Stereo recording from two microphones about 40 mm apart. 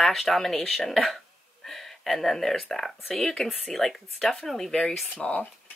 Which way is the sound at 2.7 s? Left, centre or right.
Centre.